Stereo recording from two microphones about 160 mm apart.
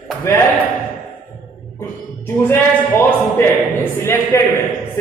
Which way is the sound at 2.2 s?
15° left (ahead or behind).